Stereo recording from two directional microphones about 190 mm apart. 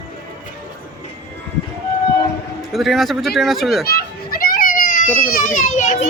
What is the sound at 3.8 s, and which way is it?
Children playing, 55° left (ahead or behind).